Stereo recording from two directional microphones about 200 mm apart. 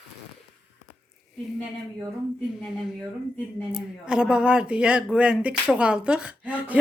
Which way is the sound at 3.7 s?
5° right (ahead or behind).